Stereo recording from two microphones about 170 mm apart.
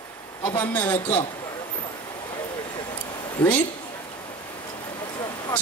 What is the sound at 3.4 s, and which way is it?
Speech, 10° left (ahead or behind).